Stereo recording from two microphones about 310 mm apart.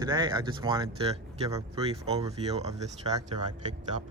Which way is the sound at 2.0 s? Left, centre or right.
Centre.